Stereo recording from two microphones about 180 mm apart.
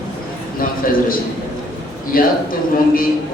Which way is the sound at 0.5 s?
50° left (ahead or behind).